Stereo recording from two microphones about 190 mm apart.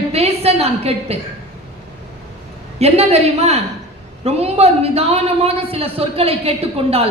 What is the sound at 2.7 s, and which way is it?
A woman's voice, 35° right (ahead or behind).